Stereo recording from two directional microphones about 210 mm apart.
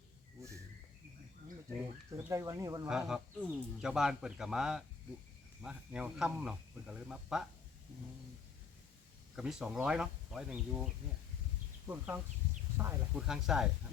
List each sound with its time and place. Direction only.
2.0 s speech: 15° right (ahead or behind)
2.9 s speech: 5° right (ahead or behind)
9.3 s speech: 5° right (ahead or behind)
11.9 s speech: 10° right (ahead or behind)